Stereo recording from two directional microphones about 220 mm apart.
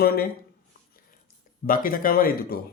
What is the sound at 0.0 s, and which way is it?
Speech, 45° left (ahead or behind).